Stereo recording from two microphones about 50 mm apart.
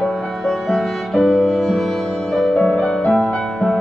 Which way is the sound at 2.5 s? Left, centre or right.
Left.